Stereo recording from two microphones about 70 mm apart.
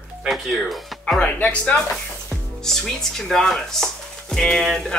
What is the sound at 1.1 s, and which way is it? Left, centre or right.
Speech, left.